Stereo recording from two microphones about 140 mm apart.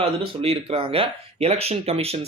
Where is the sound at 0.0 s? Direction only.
45° right (ahead or behind).